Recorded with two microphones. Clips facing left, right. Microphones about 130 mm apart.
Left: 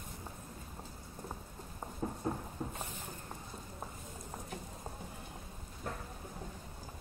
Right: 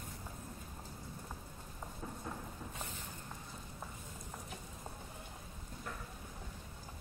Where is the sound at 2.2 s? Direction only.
40° left (ahead or behind).